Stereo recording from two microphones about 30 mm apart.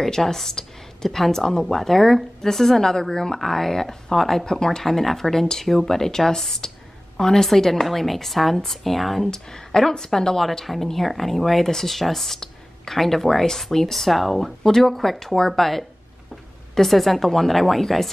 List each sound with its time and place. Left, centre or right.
0.0 s a woman's voice: centre
9.3 s speech: centre
10.6 s a woman's voice: centre